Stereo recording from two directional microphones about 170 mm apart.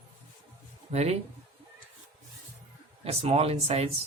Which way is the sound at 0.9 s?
40° right (ahead or behind).